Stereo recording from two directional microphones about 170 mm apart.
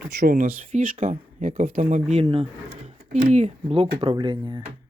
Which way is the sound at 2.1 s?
35° right (ahead or behind).